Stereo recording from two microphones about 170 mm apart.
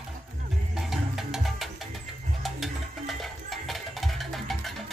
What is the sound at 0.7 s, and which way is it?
Music, 5° right (ahead or behind).